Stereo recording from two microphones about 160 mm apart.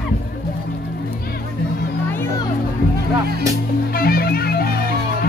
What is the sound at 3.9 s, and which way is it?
Music, 70° left (ahead or behind).